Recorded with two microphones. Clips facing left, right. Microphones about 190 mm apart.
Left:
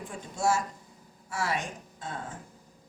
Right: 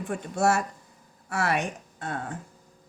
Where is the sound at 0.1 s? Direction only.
65° right (ahead or behind).